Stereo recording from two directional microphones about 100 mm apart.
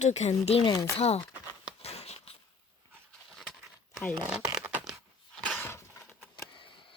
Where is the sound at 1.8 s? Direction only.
90° left.